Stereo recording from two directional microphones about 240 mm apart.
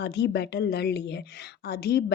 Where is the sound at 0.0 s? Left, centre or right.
Left.